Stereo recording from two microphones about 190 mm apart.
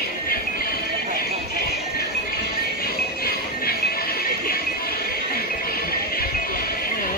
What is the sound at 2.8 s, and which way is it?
Music, 55° left (ahead or behind).